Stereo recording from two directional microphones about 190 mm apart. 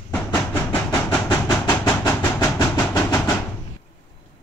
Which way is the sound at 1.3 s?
20° left (ahead or behind).